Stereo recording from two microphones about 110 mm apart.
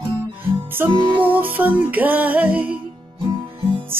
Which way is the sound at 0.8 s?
45° right (ahead or behind).